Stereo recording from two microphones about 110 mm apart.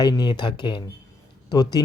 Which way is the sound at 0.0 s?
40° left (ahead or behind).